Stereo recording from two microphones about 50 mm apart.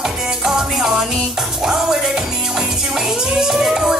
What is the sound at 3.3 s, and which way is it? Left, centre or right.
Music, centre.